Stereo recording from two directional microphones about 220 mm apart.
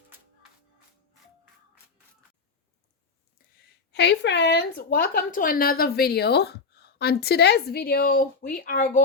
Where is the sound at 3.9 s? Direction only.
50° left (ahead or behind).